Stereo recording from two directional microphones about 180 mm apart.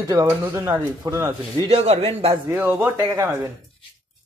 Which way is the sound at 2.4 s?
10° right (ahead or behind).